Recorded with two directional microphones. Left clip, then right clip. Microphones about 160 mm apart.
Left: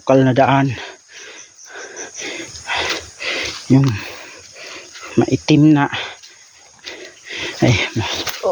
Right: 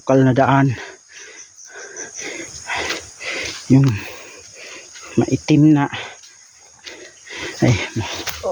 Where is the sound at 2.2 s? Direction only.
25° right (ahead or behind).